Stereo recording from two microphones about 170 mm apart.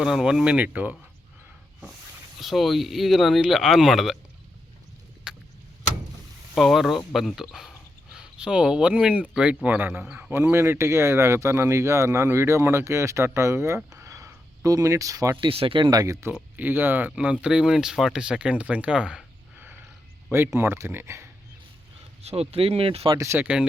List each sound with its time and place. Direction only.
0.0 s speech: 5° right (ahead or behind)
2.4 s speech: centre (ahead or behind)
5.3 s vehicle: 5° right (ahead or behind)
6.5 s speech: centre (ahead or behind); by 15.4 s 20° right (ahead or behind)
15.4 s speech: 30° right (ahead or behind); by 21.2 s 15° right (ahead or behind)
22.2 s speech: 35° right (ahead or behind)
23.1 s speech: 15° right (ahead or behind)